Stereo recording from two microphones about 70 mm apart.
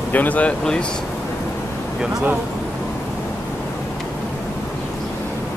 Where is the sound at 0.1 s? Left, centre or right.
Left.